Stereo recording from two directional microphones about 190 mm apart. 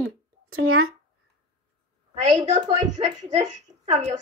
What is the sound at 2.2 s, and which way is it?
A woman's voice, 35° right (ahead or behind).